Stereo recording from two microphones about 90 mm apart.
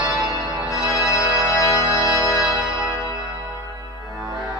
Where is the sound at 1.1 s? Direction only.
35° left (ahead or behind).